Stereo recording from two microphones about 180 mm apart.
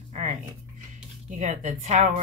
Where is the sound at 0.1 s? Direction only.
40° right (ahead or behind).